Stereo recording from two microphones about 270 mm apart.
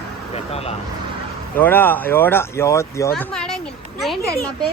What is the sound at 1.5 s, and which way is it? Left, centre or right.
Speech, centre.